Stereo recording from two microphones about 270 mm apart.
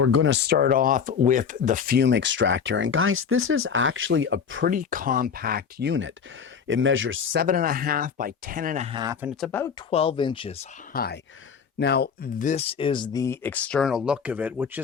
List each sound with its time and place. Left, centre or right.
0.0 s speech: right
0.3 s speech: right
4.7 s speech: right
7.4 s speech: right
9.2 s speech: centre
9.9 s speech: left
10.9 s speech: left; by 14.8 s centre